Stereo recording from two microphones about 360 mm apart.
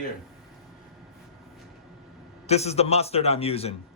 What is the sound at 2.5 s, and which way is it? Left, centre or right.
A man's voice, centre.